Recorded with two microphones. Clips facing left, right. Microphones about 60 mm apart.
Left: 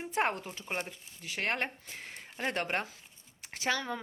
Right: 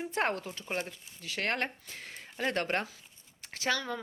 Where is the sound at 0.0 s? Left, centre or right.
Centre.